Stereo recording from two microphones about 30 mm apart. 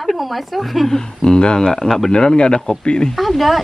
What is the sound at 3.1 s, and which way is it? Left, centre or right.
Speech, centre.